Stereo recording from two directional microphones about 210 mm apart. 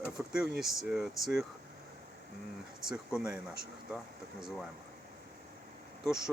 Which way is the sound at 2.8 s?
5° right (ahead or behind).